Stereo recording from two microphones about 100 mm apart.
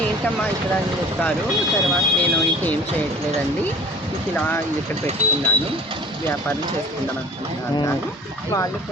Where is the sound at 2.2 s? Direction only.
15° left (ahead or behind).